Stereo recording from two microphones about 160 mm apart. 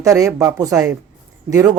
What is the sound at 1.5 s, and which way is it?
Speech, 20° right (ahead or behind).